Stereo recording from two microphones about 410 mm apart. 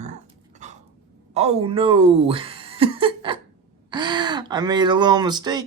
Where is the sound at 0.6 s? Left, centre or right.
Centre.